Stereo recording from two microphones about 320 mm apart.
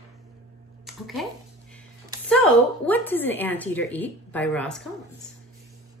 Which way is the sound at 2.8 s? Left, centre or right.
Centre.